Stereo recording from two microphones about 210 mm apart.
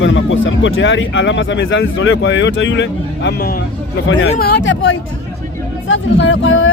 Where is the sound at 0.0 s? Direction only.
65° left (ahead or behind).